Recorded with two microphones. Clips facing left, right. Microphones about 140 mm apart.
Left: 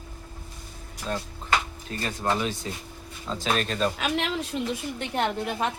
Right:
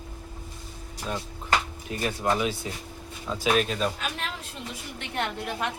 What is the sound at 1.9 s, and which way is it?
Speech, 10° right (ahead or behind).